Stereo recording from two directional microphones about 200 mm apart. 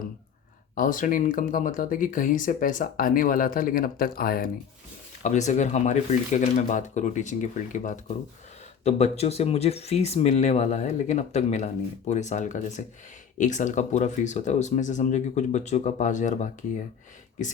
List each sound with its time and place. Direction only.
0.8 s speech: 40° left (ahead or behind)